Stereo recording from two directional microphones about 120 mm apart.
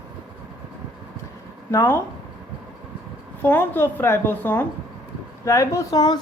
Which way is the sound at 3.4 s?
15° left (ahead or behind).